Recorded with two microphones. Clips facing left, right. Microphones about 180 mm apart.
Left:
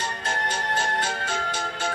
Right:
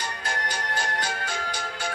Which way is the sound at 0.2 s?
25° left (ahead or behind).